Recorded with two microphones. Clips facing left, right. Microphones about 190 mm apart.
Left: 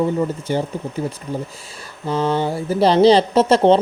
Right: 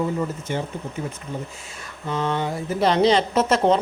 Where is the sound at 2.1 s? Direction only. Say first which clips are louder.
Left 5 dB; 30° left (ahead or behind).